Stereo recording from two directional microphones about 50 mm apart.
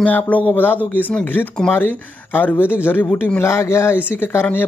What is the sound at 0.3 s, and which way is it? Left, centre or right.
Speech, left.